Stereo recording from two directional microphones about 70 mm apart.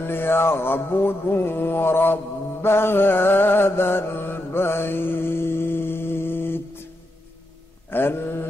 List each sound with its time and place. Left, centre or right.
0.0 s mantra: left
7.9 s mantra: left